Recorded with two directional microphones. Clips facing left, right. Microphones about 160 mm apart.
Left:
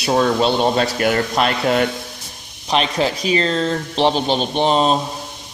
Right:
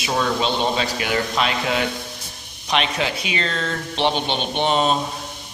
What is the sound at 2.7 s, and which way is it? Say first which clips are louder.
A man's voice: left 4 dB; 35° left (ahead or behind).